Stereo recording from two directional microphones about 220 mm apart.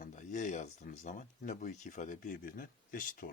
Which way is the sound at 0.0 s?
35° left (ahead or behind).